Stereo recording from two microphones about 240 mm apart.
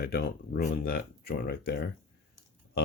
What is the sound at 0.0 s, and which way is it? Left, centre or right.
Speech, left.